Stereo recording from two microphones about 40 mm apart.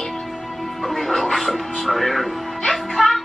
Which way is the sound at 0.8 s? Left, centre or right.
Centre.